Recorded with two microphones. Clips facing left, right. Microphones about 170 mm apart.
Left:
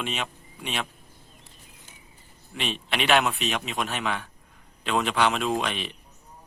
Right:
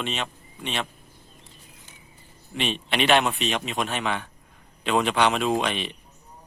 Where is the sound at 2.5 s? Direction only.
Centre (ahead or behind).